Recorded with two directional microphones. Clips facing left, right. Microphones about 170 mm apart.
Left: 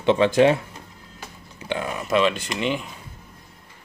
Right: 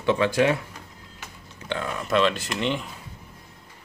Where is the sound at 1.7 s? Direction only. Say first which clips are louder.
Left 2 dB; 15° left (ahead or behind).